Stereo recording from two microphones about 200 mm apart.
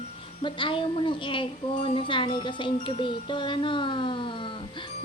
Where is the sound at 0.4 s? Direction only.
25° left (ahead or behind).